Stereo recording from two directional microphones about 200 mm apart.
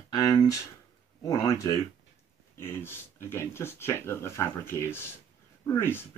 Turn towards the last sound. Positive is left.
turn(degrees=10)  # may be behind; listen again after turning